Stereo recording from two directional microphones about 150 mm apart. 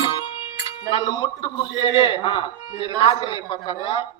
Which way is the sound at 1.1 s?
30° left (ahead or behind).